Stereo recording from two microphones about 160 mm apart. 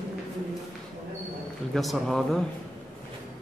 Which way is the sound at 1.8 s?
Centre (ahead or behind).